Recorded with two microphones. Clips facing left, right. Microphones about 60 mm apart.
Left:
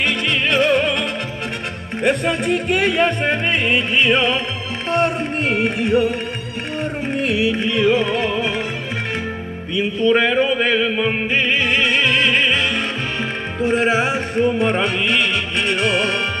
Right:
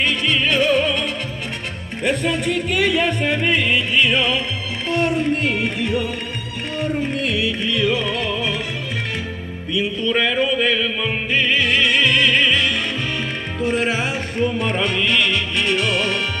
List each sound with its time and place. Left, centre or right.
0.0 s music: left
2.0 s music: left
7.2 s music: centre
7.7 s music: left
10.0 s music: left
13.7 s music: left
14.0 s music: centre